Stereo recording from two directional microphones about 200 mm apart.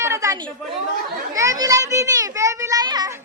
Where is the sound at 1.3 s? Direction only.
15° right (ahead or behind).